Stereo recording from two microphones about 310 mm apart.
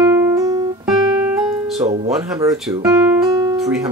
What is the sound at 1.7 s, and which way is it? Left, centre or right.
Speech, right.